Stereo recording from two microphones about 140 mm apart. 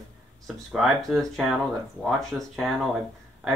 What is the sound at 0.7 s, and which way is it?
Speech, centre (ahead or behind).